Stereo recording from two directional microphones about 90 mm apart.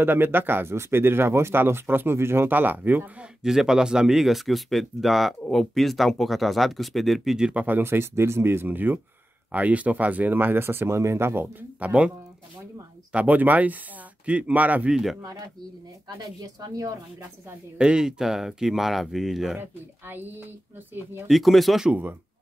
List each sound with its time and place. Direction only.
0.0 s speech: 25° right (ahead or behind)
3.4 s speech: 5° right (ahead or behind)
7.6 s speech: 20° right (ahead or behind)
11.8 s speech: 15° right (ahead or behind)
13.1 s speech: 15° right (ahead or behind)
15.2 s speech: 45° right (ahead or behind)
17.7 s speech: 10° right (ahead or behind)
19.6 s speech: 25° right (ahead or behind)
21.3 s speech: centre (ahead or behind)